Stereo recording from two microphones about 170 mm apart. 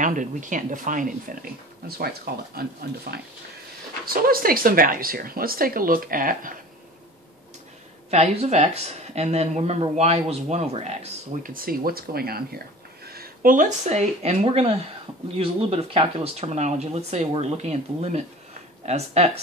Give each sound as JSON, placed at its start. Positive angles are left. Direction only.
{"t": 0.0, "sound": "speech", "side_deg": -50}
{"t": 4.0, "sound": "speech", "side_deg": -60}
{"t": 8.1, "sound": "speech", "side_deg": -40}
{"t": 11.5, "sound": "speech", "side_deg": -60}